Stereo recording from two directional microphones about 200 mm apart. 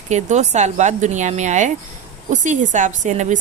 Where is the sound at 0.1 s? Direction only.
35° right (ahead or behind).